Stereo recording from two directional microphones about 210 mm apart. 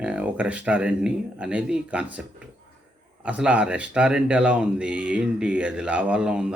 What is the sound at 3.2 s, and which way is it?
Speech, 5° right (ahead or behind).